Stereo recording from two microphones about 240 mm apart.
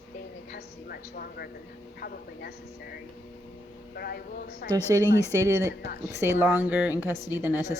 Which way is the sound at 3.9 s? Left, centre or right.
Left.